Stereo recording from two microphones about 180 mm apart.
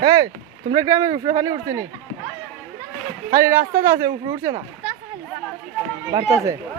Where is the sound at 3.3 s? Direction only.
15° right (ahead or behind).